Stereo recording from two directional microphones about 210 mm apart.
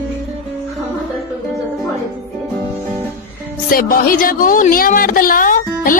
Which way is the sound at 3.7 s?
45° left (ahead or behind).